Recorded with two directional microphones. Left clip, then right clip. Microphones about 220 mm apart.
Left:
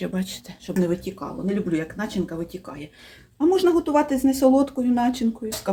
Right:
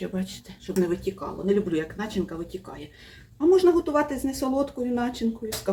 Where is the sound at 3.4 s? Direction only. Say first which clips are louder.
Even; 50° left (ahead or behind).